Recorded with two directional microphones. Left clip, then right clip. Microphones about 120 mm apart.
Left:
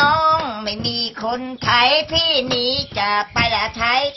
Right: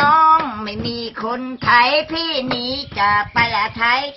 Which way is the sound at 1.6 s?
20° left (ahead or behind).